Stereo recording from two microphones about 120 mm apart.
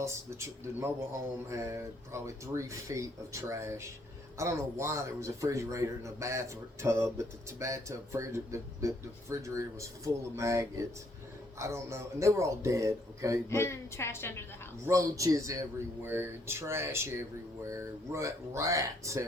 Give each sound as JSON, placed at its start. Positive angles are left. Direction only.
{"t": 0.0, "sound": "a man's voice", "side_deg": -25}
{"t": 13.5, "sound": "a woman's voice", "side_deg": 20}
{"t": 14.8, "sound": "a man's voice", "side_deg": -25}